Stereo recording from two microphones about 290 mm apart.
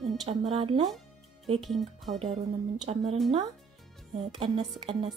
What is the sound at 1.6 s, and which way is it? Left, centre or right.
Speech, centre.